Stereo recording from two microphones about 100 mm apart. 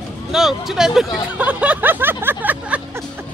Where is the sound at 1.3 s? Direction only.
15° right (ahead or behind).